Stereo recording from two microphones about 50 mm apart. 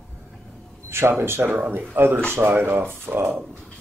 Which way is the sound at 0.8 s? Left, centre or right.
Right.